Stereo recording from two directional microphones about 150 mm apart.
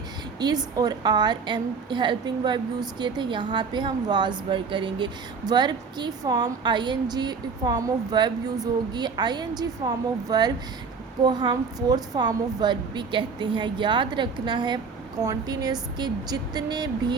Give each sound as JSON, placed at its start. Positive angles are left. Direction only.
{"t": 0.3, "sound": "a woman's voice", "side_deg": -25}